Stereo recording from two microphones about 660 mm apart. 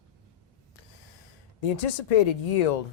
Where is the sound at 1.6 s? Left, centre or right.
Left.